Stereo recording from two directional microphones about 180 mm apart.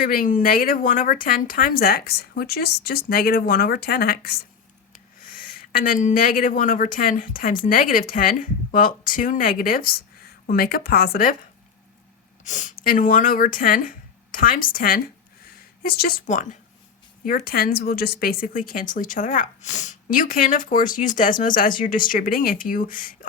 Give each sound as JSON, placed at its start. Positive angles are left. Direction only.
{"t": 0.0, "sound": "a woman's voice", "side_deg": 50}
{"t": 12.5, "sound": "speech", "side_deg": 45}
{"t": 17.2, "sound": "speech", "side_deg": 55}